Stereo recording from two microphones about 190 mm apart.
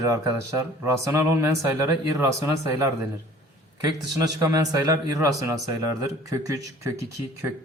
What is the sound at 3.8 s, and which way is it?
Speech, 20° right (ahead or behind).